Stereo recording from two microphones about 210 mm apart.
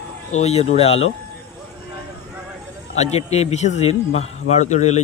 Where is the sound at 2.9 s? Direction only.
30° left (ahead or behind).